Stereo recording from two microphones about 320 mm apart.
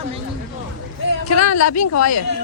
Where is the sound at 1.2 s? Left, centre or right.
Left.